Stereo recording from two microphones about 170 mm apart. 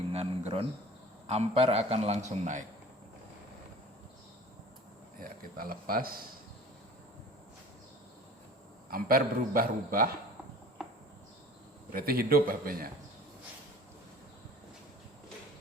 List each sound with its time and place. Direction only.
0.1 s a sound: 35° right (ahead or behind)
1.3 s a man's voice: 35° right (ahead or behind)
5.2 s a man's voice: 60° right (ahead or behind)
8.9 s a man's voice: 60° right (ahead or behind)
11.9 s a man's voice: 60° right (ahead or behind)